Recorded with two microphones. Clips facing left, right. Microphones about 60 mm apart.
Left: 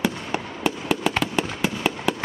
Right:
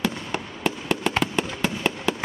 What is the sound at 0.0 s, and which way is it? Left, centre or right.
Fireworks, centre.